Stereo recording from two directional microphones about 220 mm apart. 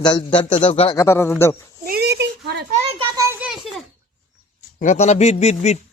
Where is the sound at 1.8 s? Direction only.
45° right (ahead or behind).